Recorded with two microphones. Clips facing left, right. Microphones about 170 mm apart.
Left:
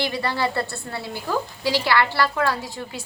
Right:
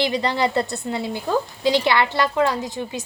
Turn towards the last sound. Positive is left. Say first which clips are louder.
# right 5 dB
turn(degrees=-20)  # may be behind; listen again after turning